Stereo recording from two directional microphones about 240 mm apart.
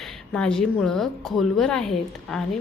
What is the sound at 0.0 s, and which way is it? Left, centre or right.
A woman's voice, centre.